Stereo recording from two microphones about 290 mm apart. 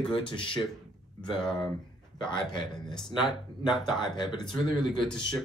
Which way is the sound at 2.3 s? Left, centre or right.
Centre.